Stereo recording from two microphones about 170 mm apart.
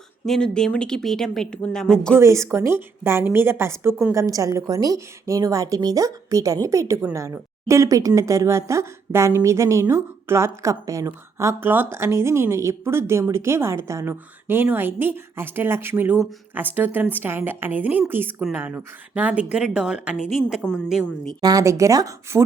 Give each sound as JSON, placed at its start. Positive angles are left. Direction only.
{"t": 0.3, "sound": "speech", "side_deg": 5}
{"t": 2.1, "sound": "a woman's voice", "side_deg": -15}
{"t": 21.4, "sound": "speech", "side_deg": -20}